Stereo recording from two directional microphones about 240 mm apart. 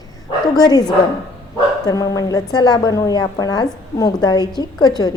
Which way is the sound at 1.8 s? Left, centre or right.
Centre.